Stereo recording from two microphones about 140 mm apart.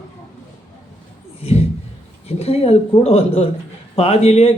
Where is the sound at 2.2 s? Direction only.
45° left (ahead or behind).